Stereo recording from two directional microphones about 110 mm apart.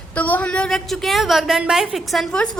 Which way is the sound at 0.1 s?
15° left (ahead or behind).